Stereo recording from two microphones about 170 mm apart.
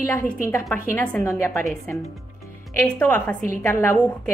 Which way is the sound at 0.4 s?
15° left (ahead or behind).